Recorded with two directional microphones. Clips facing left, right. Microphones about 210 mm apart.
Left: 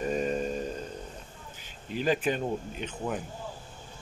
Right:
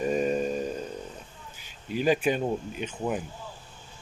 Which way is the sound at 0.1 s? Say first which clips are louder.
Right 3 dB; 10° right (ahead or behind).